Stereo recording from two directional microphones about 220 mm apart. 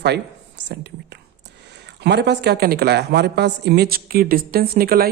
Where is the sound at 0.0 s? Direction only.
50° right (ahead or behind).